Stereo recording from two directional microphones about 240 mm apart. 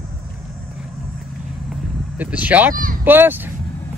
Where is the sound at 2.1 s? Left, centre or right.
Centre.